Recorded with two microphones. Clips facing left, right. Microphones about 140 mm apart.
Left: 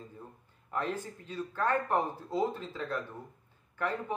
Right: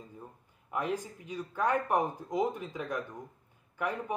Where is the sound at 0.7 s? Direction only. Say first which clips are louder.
Right 1 dB; 10° right (ahead or behind).